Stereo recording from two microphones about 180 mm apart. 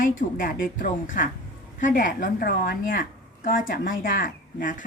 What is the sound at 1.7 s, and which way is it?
A woman's voice, 45° left (ahead or behind).